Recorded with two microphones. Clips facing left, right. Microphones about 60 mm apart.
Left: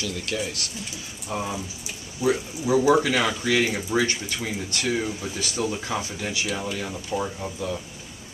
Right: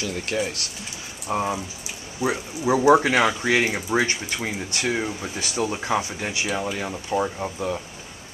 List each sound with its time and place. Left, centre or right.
0.0 s speech: right